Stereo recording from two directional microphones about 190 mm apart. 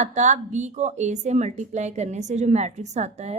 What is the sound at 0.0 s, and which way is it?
A woman's voice, 40° right (ahead or behind).